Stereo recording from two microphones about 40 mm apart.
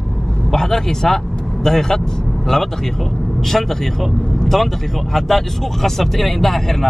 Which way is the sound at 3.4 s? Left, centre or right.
Centre.